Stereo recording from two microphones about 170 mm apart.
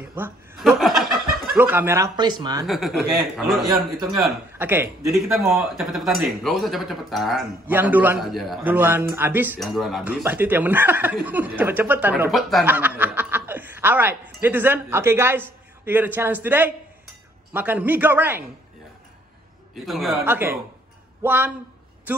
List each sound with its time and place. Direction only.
0.0 s speech: 10° right (ahead or behind)
0.6 s speech: centre (ahead or behind)
2.1 s speech: 25° right (ahead or behind)
2.6 s speech: centre (ahead or behind)
2.9 s a man's voice: 65° right (ahead or behind)
3.3 s speech: centre (ahead or behind)
4.6 s a man's voice: 10° right (ahead or behind)
5.1 s speech: centre (ahead or behind)
8.6 s speech: 10° right (ahead or behind)
9.6 s speech: centre (ahead or behind)
12.3 s speech: centre (ahead or behind)
12.6 s speech: 10° right (ahead or behind)
19.7 s speech: centre (ahead or behind)
20.2 s a man's voice: 10° right (ahead or behind)